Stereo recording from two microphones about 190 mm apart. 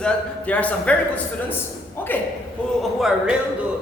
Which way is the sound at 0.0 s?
10° left (ahead or behind).